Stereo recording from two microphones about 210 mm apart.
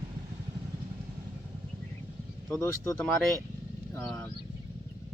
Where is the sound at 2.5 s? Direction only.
15° left (ahead or behind).